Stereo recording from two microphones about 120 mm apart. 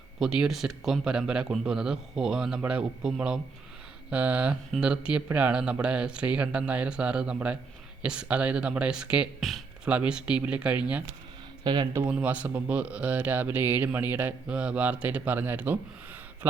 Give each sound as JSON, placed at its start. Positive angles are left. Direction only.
{"t": 0.2, "sound": "speech", "side_deg": -5}
{"t": 9.4, "sound": "a sound", "side_deg": 0}
{"t": 9.9, "sound": "speech", "side_deg": -10}
{"t": 11.6, "sound": "speech", "side_deg": -40}
{"t": 12.1, "sound": "speech", "side_deg": -10}